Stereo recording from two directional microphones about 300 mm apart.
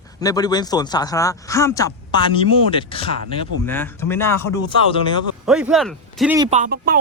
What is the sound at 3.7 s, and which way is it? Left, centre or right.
Speech, centre.